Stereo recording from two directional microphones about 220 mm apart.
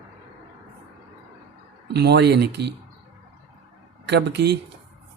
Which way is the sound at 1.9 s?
50° right (ahead or behind).